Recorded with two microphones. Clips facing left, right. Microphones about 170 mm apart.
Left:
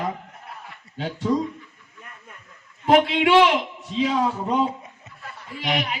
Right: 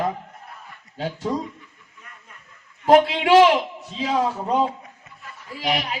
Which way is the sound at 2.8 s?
40° right (ahead or behind).